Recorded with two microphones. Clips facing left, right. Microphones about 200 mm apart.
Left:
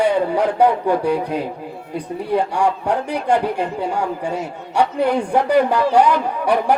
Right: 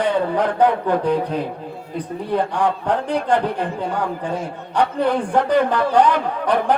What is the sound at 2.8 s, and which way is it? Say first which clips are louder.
Speech: even; 10° left (ahead or behind).